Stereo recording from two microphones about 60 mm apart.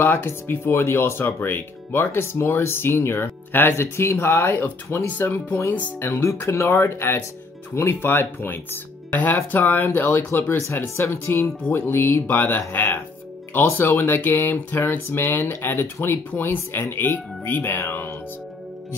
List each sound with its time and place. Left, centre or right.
0.0 s speech: left
9.6 s speech: left
11.1 s speech: left